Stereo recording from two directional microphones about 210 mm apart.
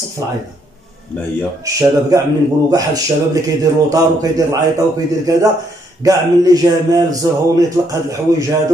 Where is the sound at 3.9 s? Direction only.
15° right (ahead or behind).